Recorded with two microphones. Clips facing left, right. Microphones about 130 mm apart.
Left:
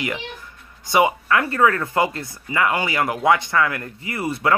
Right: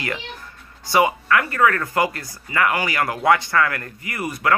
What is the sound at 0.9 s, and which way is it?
Speech, 25° left (ahead or behind).